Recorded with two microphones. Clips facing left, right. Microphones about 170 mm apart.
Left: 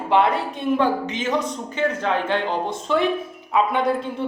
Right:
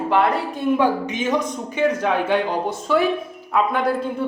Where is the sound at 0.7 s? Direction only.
15° right (ahead or behind).